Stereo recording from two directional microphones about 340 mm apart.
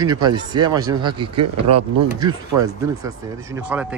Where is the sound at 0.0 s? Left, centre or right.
Centre.